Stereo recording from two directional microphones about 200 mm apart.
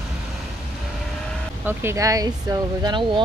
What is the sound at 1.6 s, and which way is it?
Speech, 15° right (ahead or behind).